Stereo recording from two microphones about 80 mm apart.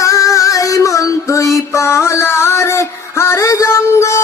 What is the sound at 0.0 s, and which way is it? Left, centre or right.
Music, left.